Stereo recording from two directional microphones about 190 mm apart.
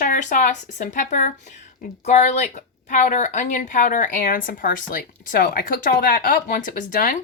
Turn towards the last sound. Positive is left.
turn(degrees=45)  # may be behind; listen again after turning